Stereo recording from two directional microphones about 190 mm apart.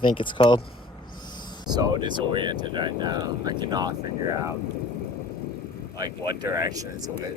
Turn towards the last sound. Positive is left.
turn(degrees=-20)  # may be behind; listen again after turning